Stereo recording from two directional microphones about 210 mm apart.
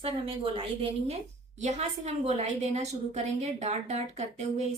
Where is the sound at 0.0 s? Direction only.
25° right (ahead or behind).